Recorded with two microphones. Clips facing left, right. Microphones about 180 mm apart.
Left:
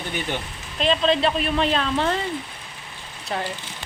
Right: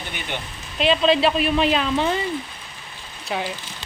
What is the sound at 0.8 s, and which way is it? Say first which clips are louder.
Speech: right 2 dB; 5° right (ahead or behind).